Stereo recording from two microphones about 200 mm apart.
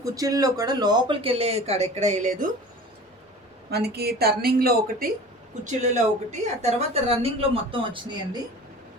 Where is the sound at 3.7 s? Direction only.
55° right (ahead or behind).